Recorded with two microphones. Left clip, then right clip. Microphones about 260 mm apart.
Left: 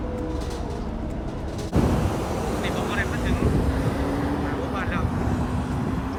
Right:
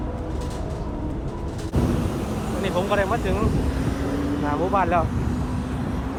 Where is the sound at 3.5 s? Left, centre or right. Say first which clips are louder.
Left 1 dB; left.